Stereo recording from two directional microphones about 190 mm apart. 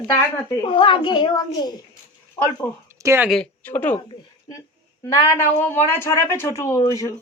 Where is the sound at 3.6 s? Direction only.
10° left (ahead or behind).